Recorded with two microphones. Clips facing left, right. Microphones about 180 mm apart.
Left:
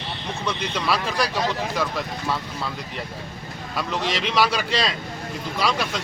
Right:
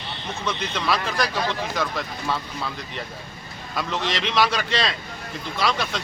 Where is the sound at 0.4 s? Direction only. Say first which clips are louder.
Even; 10° left (ahead or behind).